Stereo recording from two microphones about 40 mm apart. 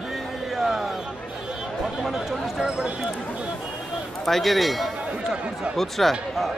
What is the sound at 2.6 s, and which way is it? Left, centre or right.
Speech, centre.